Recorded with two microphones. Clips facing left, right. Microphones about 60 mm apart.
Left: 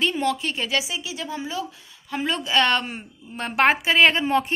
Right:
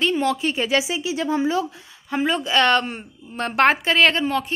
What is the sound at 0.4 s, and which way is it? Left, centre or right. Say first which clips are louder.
Speech: right 5 dB; centre.